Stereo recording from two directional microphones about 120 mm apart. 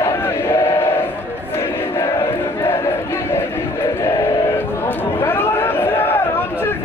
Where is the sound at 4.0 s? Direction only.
30° left (ahead or behind).